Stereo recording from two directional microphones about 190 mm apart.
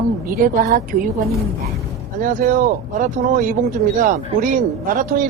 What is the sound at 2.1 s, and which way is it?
Speech, 45° right (ahead or behind).